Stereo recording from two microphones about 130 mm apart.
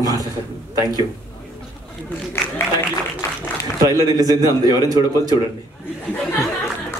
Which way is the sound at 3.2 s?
20° left (ahead or behind).